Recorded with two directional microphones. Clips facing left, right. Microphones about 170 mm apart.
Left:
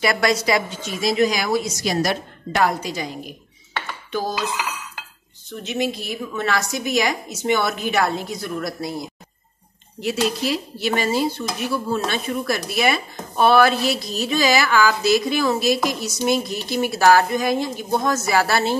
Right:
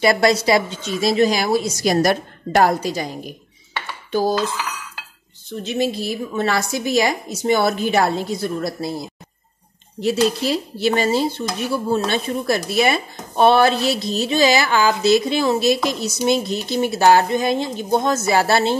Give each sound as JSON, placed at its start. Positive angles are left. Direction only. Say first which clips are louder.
{"t": 0.0, "sound": "speech", "louder": "right 4 dB", "side_deg": -30}
{"t": 1.9, "sound": "a woman's voice", "louder": "right 6 dB", "side_deg": -45}
{"t": 4.1, "sound": "dishes", "louder": "right 6 dB", "side_deg": -35}
{"t": 5.6, "sound": "a woman's voice", "louder": "right 3 dB", "side_deg": -30}
{"t": 10.0, "sound": "speech", "louder": "right 4 dB", "side_deg": -30}